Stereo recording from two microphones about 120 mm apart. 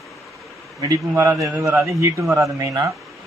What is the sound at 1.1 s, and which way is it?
A man's voice, 20° right (ahead or behind).